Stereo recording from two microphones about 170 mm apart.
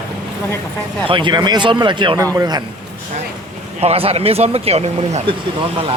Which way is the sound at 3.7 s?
35° right (ahead or behind).